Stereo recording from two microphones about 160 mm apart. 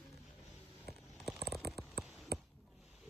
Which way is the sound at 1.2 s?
Centre (ahead or behind).